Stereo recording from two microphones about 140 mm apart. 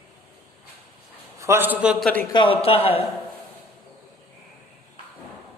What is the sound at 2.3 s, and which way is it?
Speech, 35° left (ahead or behind).